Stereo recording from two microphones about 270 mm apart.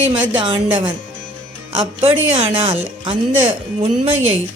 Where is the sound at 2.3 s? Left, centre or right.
Centre.